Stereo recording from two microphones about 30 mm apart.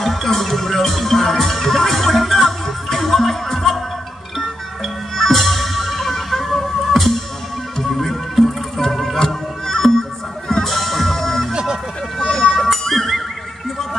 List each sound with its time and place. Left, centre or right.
0.0 s music: centre
5.1 s music: centre
12.2 s run: centre
12.7 s music: centre